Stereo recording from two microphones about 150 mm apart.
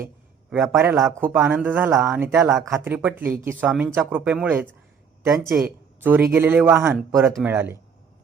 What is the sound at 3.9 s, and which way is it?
Speech, 10° right (ahead or behind).